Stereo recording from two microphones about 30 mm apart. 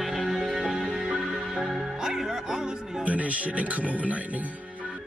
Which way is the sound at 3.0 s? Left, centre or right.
Right.